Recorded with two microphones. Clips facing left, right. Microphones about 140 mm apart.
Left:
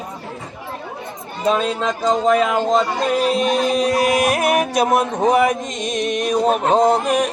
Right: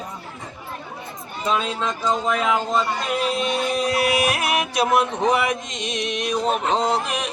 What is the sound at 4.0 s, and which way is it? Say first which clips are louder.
Music: left 4 dB; 40° left (ahead or behind).